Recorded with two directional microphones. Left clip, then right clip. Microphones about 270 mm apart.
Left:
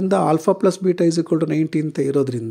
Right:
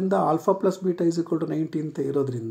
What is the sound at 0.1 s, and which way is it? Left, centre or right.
Speech, left.